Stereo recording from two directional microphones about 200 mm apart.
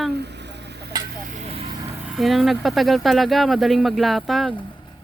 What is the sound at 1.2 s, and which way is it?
Vehicle, 35° right (ahead or behind).